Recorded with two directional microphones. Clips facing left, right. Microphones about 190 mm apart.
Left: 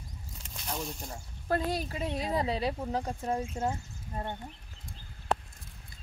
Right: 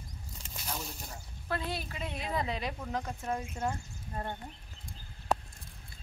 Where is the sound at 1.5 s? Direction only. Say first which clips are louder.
Left 6 dB; 40° left (ahead or behind); by 4.4 s 20° left (ahead or behind).